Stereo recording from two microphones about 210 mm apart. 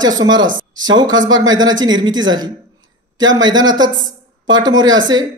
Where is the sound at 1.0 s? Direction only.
65° right (ahead or behind).